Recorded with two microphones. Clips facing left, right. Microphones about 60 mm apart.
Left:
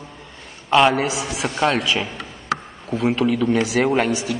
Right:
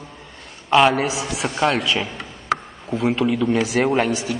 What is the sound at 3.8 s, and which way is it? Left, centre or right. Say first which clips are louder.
Speech: even; centre.